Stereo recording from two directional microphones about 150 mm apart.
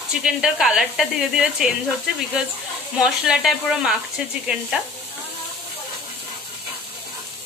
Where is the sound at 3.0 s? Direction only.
5° right (ahead or behind).